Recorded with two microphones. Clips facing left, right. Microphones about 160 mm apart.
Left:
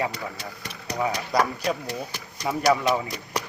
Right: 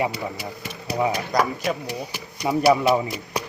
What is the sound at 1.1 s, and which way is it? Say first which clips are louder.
Speech: right 2 dB; 5° right (ahead or behind).